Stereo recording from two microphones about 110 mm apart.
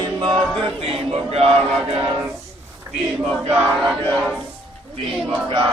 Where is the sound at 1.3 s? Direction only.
65° right (ahead or behind).